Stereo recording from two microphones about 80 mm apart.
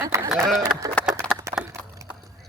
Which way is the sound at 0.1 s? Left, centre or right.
Right.